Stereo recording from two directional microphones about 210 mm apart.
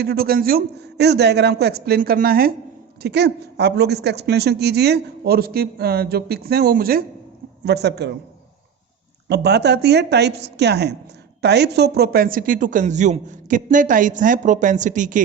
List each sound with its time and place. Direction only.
0.0 s a woman's voice: 45° right (ahead or behind)
9.3 s a woman's voice: 55° right (ahead or behind); by 15.2 s 35° right (ahead or behind)